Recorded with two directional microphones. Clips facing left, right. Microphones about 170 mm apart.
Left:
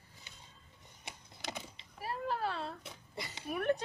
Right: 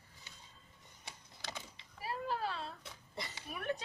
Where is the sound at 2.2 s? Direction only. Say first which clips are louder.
Left 3 dB; 55° left (ahead or behind).